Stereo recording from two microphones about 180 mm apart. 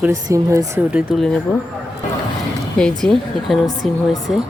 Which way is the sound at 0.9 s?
5° right (ahead or behind).